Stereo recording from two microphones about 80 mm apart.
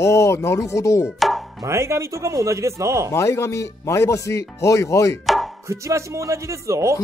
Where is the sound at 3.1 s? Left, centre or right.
Left.